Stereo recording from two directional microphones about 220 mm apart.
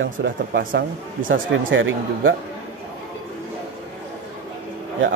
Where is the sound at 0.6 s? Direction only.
40° right (ahead or behind).